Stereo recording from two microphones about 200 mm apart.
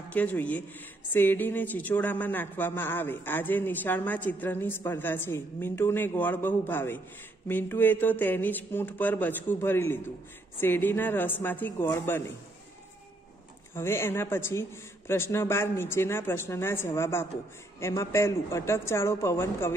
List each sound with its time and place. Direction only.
0.1 s speech: 5° left (ahead or behind)
13.7 s speech: 10° left (ahead or behind)